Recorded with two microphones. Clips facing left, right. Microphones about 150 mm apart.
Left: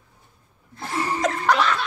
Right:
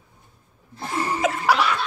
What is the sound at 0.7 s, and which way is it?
Laughter, 5° right (ahead or behind).